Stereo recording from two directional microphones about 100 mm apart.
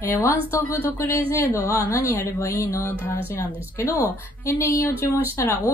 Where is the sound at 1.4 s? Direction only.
20° right (ahead or behind).